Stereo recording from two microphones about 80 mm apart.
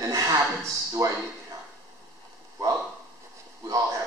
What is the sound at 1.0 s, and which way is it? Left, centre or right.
Speech, right.